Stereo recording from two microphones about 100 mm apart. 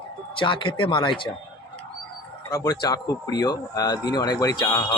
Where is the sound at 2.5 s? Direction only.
40° left (ahead or behind).